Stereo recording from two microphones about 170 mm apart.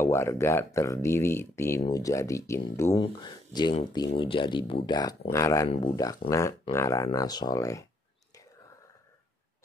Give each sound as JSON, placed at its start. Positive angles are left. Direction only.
{"t": 0.0, "sound": "speech", "side_deg": 15}